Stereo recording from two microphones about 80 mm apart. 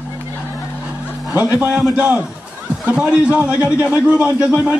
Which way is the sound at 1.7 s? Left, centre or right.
Centre.